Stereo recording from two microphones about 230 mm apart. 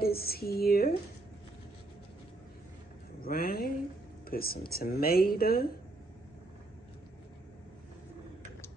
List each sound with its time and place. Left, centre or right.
0.0 s speech: left
3.2 s a sound: left
4.3 s speech: left